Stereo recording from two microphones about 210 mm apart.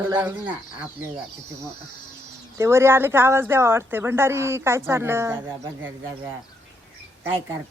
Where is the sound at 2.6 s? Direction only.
15° right (ahead or behind).